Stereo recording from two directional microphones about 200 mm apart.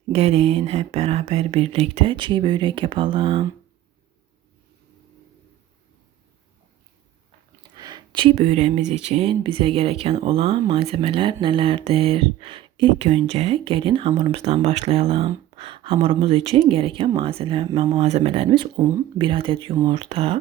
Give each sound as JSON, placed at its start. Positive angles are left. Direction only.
{"t": 0.1, "sound": "speech", "side_deg": -30}
{"t": 7.7, "sound": "a sound", "side_deg": -20}
{"t": 8.9, "sound": "speech", "side_deg": -30}